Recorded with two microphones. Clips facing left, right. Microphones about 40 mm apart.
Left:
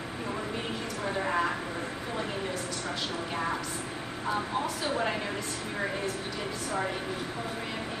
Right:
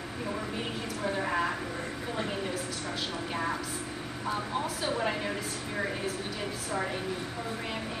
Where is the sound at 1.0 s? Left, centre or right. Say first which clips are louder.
Left 1 dB; centre.